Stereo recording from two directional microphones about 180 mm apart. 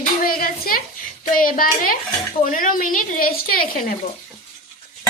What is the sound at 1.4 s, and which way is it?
A woman's voice, 50° left (ahead or behind).